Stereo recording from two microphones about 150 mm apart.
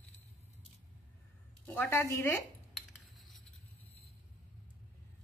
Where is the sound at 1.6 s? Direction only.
15° left (ahead or behind).